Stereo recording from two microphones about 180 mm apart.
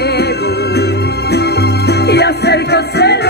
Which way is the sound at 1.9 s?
65° left (ahead or behind).